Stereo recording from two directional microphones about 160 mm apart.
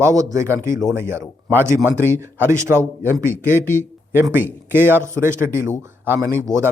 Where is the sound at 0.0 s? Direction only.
20° right (ahead or behind).